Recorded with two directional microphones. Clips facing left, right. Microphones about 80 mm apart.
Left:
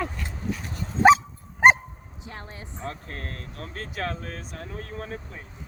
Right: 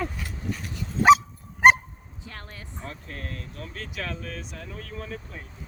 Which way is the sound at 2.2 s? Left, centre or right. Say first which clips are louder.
Left 2 dB; left.